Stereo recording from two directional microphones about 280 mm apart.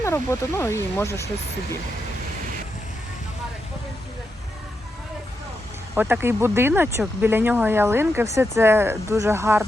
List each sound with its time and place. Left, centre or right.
0.0 s speech: centre
5.9 s speech: centre